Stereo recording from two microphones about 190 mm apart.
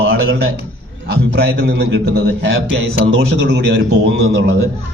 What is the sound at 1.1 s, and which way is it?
A man's voice, 60° right (ahead or behind).